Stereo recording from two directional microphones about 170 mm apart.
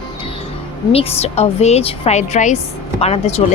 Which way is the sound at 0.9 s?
40° left (ahead or behind).